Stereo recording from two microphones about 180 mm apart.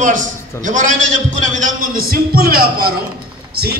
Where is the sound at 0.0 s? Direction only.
45° right (ahead or behind).